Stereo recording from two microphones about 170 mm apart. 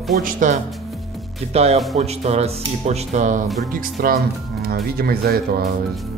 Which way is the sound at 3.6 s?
60° right (ahead or behind).